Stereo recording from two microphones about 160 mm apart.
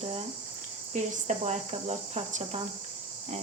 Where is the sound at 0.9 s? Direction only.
50° right (ahead or behind).